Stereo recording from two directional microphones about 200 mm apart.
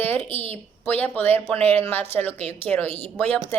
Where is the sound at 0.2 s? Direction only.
30° right (ahead or behind).